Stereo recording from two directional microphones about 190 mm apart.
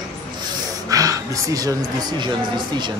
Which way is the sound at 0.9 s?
20° right (ahead or behind).